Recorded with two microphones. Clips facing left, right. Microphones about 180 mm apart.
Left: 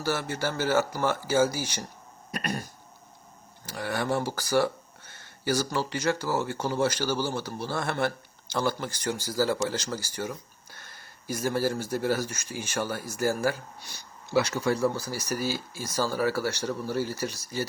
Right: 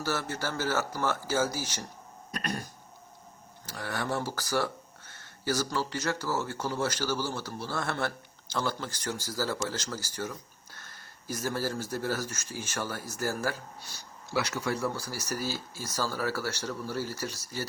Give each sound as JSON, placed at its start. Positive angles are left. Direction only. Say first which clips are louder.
{"t": 0.0, "sound": "speech", "louder": "left 3 dB", "side_deg": 15}
{"t": 3.7, "sound": "speech", "louder": "left 4 dB", "side_deg": 15}
{"t": 14.3, "sound": "speech", "louder": "left 6 dB", "side_deg": 25}